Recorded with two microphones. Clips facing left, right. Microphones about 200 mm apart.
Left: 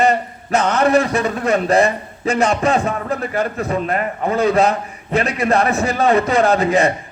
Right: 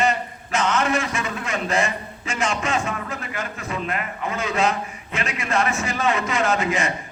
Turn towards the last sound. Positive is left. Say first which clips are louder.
# left 8 dB
turn(degrees=35)  # may be behind; listen again after turning